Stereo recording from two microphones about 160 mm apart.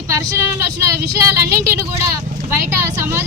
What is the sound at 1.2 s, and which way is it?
Speech, 20° right (ahead or behind).